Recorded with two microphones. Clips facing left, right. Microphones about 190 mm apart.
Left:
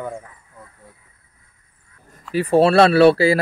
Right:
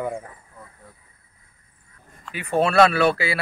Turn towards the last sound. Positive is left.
turn(degrees=35)  # may be behind; listen again after turning